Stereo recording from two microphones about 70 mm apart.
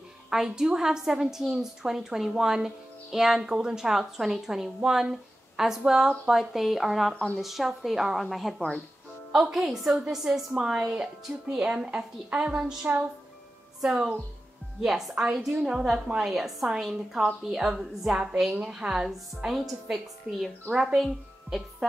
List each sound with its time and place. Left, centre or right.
0.3 s a woman's voice: centre
14.8 s a woman's voice: centre